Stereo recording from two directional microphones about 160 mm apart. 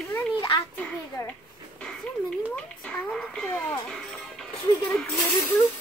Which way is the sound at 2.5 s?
5° left (ahead or behind).